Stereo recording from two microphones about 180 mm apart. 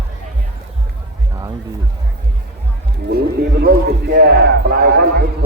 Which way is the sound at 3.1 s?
60° right (ahead or behind).